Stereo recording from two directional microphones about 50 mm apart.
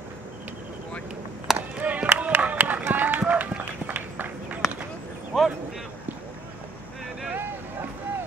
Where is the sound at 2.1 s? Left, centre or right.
Right.